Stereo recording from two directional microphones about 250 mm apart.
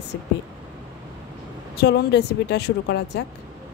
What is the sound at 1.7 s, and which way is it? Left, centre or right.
A woman's voice, left.